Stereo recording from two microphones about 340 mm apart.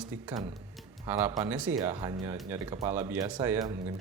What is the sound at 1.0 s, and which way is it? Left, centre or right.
Speech, centre.